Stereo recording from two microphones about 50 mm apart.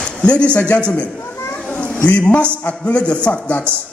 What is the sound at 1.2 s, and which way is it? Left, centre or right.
Children playing, left.